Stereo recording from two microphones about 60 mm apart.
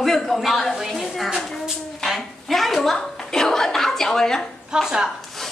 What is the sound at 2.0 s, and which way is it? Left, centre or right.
Chuckle, centre.